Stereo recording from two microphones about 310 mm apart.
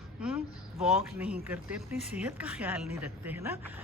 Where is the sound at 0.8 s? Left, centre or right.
Centre.